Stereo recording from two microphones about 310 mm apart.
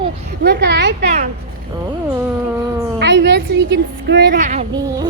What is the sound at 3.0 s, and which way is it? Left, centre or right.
A woman's voice, right.